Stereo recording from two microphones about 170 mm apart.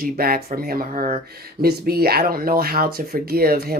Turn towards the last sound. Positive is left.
turn(degrees=-60)  # may be behind; listen again after turning